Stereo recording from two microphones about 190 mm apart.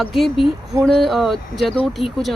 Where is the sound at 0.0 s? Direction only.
Centre (ahead or behind).